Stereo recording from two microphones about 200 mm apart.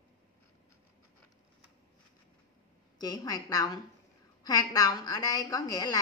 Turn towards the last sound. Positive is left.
turn(degrees=20)  # may be behind; listen again after turning